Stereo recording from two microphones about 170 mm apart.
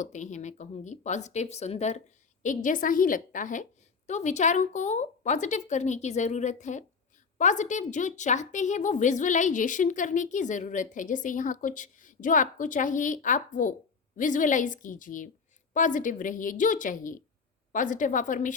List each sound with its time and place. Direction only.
0.0 s a woman's voice: 45° left (ahead or behind)